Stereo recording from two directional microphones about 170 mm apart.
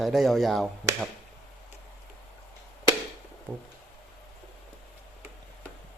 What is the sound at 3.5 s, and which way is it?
Speech, 10° right (ahead or behind).